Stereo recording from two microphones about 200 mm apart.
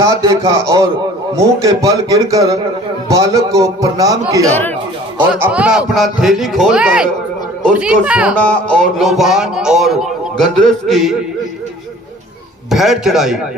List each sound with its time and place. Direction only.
0.0 s a man's voice: 20° right (ahead or behind)
5.3 s speech: 5° right (ahead or behind)
12.7 s speech: centre (ahead or behind)